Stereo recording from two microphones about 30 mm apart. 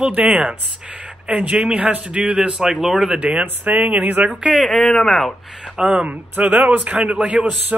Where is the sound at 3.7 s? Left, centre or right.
Right.